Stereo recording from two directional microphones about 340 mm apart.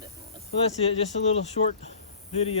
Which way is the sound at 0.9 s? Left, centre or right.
Centre.